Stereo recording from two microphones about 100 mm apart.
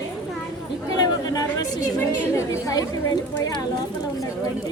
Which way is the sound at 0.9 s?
40° left (ahead or behind).